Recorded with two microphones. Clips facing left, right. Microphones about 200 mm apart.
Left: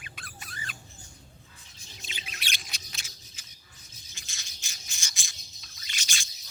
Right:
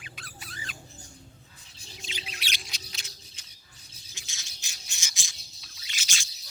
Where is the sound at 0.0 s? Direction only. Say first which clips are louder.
Even; 50° left (ahead or behind).